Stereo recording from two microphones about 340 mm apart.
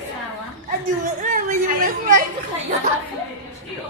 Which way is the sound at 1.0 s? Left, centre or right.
Right.